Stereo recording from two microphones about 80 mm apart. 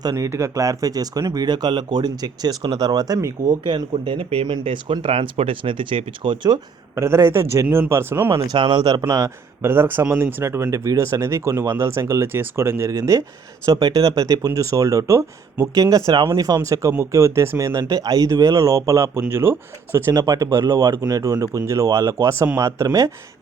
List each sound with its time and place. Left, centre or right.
0.2 s speech: right
3.7 s speech: right
7.0 s speech: right
8.5 s speech: right
9.6 s speech: right
12.9 s speech: right
13.7 s speech: right
15.7 s speech: right
16.2 s speech: right
16.6 s speech: right
17.7 s speech: right
20.1 s speech: right